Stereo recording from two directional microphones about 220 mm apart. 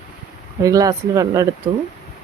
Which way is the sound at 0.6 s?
15° right (ahead or behind).